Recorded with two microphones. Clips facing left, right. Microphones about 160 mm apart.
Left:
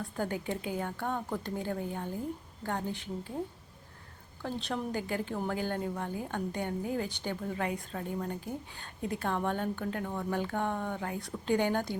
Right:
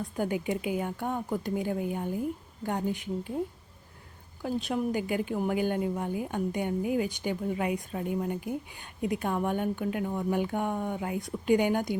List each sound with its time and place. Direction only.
0.2 s a woman's voice: 15° right (ahead or behind)
4.4 s a woman's voice: 10° right (ahead or behind)